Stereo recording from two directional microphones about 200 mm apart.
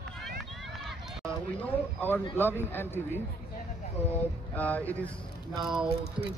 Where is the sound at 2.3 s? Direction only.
10° left (ahead or behind).